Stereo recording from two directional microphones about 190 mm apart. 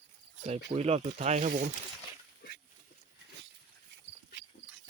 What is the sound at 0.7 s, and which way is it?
Speech, 35° right (ahead or behind).